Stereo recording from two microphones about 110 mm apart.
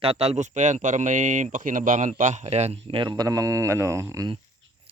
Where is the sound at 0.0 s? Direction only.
65° right (ahead or behind); by 4.3 s 30° right (ahead or behind).